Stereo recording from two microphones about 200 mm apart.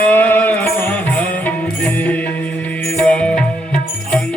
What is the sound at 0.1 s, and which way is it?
Music, 10° left (ahead or behind).